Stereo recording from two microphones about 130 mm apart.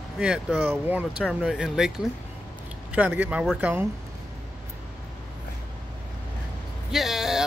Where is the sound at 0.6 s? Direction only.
15° right (ahead or behind).